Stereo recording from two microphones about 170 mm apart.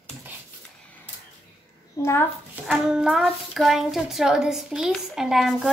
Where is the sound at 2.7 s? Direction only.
5° right (ahead or behind).